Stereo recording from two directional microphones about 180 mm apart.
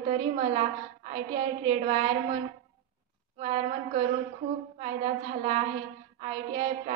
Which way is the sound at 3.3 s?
40° right (ahead or behind).